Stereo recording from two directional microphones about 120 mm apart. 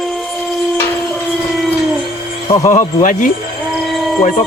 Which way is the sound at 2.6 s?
90° left.